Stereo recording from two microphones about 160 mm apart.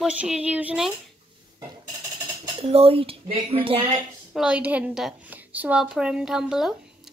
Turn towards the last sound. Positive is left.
turn(degrees=-5)  # may be behind; listen again after turning